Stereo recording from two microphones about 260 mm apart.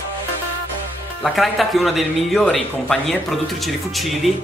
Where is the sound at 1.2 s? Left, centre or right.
Centre.